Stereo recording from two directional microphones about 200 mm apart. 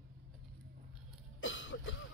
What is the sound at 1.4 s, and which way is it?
Cough, 70° left (ahead or behind).